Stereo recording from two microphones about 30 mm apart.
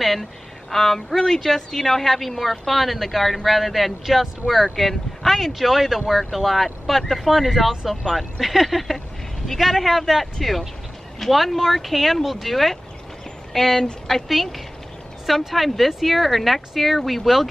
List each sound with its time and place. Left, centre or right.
0.0 s a woman's voice: centre